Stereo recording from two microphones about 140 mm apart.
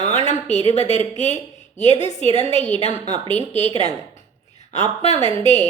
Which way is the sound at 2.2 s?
40° right (ahead or behind).